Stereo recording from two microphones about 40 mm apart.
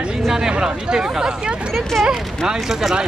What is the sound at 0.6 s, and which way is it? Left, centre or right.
Speech, centre.